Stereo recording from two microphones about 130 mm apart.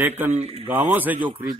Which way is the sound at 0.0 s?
15° right (ahead or behind).